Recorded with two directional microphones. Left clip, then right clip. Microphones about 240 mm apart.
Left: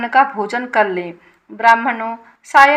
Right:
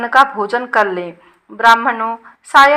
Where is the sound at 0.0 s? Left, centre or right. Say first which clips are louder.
Right 2 dB; right.